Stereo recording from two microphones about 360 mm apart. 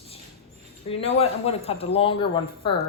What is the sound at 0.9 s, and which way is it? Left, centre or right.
Speech, centre.